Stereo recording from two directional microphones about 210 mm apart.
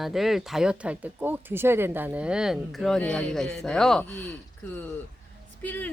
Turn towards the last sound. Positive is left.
turn(degrees=10)  # may be behind; listen again after turning